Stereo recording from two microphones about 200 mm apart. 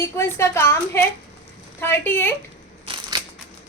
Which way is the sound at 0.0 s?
15° left (ahead or behind).